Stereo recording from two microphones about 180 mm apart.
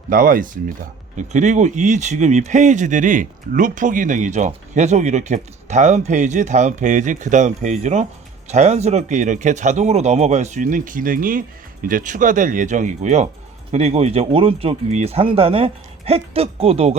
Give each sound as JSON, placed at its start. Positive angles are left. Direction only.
{"t": 0.1, "sound": "speech", "side_deg": -50}